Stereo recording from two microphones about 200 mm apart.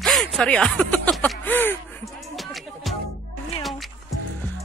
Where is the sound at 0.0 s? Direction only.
Centre (ahead or behind).